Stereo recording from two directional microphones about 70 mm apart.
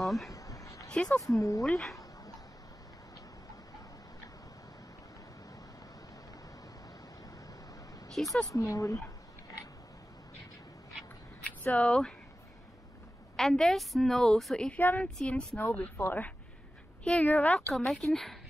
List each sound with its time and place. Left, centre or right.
0.0 s speech: centre
0.3 s a sound: left
0.8 s speech: centre
1.2 s speech: left
1.6 s a woman's voice: centre
8.1 s speech: centre
8.5 s speech: left
11.6 s speech: centre
13.4 s a woman's voice: centre
14.8 s speech: left
15.1 s speech: centre
16.0 s speech: left
17.0 s speech: centre
17.7 s a woman's voice: centre